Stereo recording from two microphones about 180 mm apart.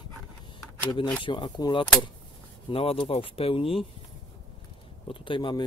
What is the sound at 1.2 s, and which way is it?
Speech, 25° left (ahead or behind).